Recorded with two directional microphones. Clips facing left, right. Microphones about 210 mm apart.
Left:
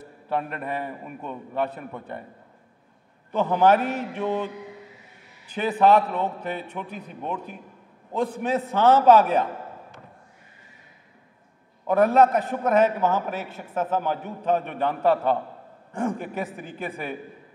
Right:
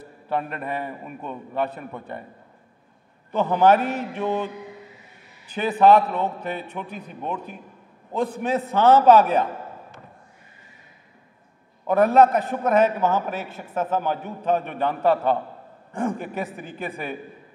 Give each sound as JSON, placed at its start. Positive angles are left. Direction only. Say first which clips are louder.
{"t": 0.3, "sound": "a man's voice", "louder": "right 1 dB", "side_deg": -20}
{"t": 3.3, "sound": "a man's voice", "louder": "right 1 dB", "side_deg": -20}
{"t": 5.6, "sound": "a man's voice", "louder": "right 2 dB", "side_deg": -15}
{"t": 8.5, "sound": "a man's voice", "louder": "right 2 dB", "side_deg": -15}
{"t": 11.9, "sound": "a man's voice", "louder": "right 2 dB", "side_deg": -15}